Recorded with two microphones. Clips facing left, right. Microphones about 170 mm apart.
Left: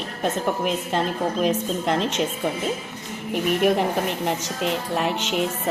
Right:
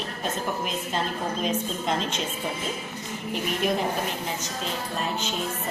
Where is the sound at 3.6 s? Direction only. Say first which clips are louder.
Left 4 dB; 65° left (ahead or behind).